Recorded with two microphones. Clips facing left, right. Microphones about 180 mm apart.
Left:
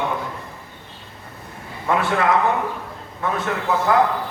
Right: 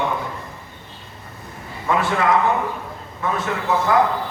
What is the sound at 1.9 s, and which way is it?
Speech, 55° left (ahead or behind).